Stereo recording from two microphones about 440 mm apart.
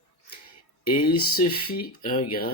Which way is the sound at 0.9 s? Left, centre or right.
Centre.